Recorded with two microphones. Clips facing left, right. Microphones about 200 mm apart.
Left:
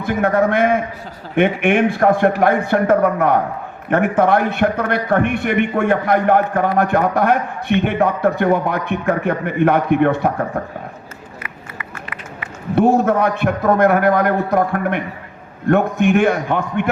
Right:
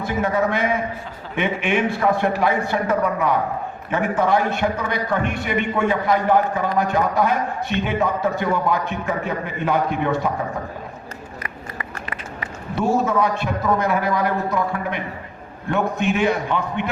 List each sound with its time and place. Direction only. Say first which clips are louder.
0.0 s a man's voice: left 5 dB; 55° left (ahead or behind)
11.4 s run: right 1 dB; 35° right (ahead or behind)
12.7 s a man's voice: left 6 dB; 60° left (ahead or behind)